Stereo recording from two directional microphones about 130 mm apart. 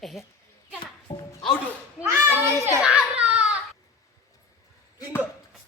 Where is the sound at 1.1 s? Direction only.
35° left (ahead or behind).